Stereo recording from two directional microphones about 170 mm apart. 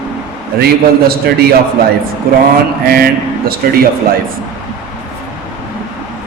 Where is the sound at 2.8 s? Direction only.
60° right (ahead or behind).